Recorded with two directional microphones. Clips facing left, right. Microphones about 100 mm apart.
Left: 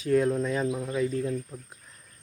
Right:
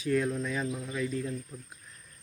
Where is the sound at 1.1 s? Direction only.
40° left (ahead or behind).